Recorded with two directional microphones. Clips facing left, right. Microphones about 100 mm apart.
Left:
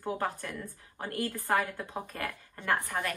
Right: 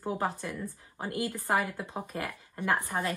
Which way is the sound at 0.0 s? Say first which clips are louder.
Right 1 dB; 15° right (ahead or behind).